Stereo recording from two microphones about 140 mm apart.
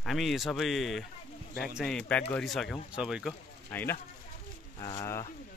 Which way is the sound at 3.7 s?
15° left (ahead or behind).